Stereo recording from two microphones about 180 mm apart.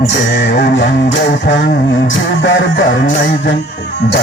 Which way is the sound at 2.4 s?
90° left.